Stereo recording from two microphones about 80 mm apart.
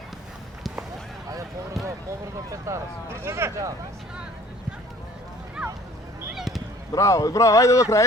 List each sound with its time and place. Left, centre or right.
2.0 s speech: right
6.3 s a sound: centre
6.9 s speech: left